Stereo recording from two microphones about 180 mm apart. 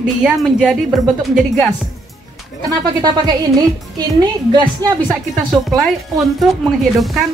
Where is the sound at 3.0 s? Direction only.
20° right (ahead or behind).